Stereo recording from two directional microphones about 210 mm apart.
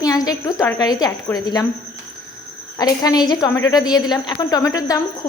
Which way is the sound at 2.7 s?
15° left (ahead or behind).